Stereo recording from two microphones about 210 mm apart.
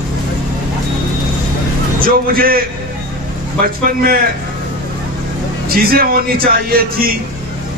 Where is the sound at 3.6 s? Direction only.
45° right (ahead or behind).